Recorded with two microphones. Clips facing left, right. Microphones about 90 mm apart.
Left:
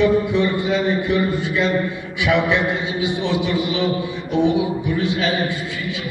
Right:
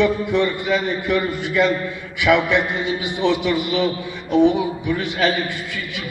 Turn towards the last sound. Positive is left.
turn(degrees=-65)  # may be behind; listen again after turning